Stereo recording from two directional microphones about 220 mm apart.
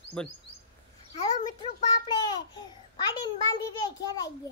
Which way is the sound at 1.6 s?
20° left (ahead or behind).